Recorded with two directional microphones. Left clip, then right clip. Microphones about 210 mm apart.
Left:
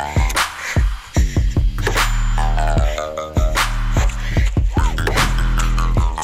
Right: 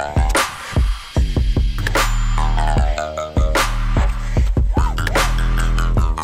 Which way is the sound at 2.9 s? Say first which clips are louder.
Right 1 dB; 40° right (ahead or behind).